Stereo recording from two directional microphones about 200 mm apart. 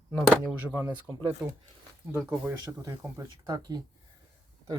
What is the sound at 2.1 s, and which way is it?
Speech, 10° right (ahead or behind).